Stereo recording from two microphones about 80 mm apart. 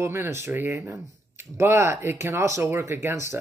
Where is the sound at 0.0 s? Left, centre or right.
Right.